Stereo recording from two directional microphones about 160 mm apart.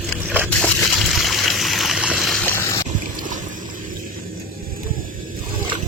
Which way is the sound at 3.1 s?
55° right (ahead or behind).